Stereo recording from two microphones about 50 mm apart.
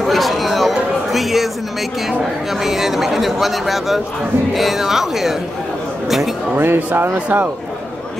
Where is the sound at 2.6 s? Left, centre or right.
Centre.